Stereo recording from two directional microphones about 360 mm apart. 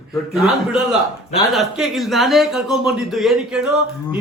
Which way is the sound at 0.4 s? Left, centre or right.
Centre.